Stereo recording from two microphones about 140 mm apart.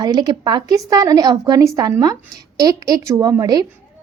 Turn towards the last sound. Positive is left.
turn(degrees=-25)  # may be behind; listen again after turning